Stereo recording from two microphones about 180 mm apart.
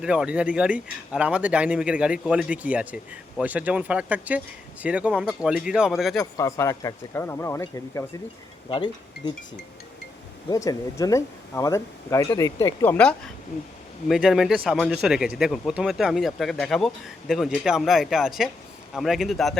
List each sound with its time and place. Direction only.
0.0 s speech: 5° right (ahead or behind)
6.3 s speech: 15° left (ahead or behind)
8.7 s speech: 25° left (ahead or behind)
10.5 s speech: 20° left (ahead or behind); by 19.5 s centre (ahead or behind)